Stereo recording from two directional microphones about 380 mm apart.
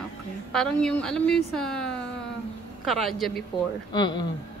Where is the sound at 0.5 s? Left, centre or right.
Centre.